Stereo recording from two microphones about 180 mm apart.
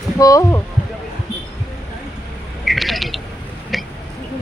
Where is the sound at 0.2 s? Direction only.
20° left (ahead or behind).